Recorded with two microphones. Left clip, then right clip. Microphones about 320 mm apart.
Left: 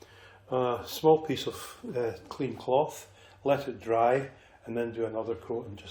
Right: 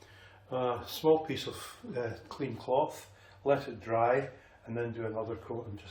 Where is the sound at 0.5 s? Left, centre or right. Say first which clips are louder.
Left 4 dB; centre.